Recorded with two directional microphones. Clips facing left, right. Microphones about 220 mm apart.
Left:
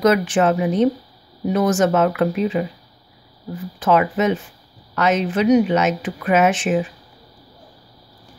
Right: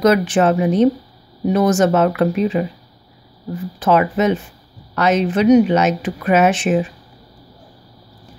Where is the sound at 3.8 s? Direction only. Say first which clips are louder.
Right 2 dB; 35° right (ahead or behind).